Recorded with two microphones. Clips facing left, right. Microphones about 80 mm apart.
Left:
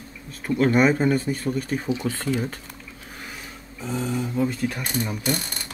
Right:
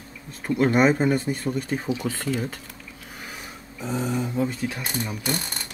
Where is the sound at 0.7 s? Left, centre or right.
Centre.